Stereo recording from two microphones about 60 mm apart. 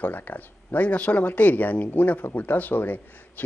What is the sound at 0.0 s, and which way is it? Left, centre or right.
Speech, left.